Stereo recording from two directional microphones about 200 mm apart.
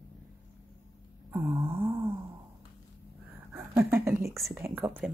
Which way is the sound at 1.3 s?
10° right (ahead or behind).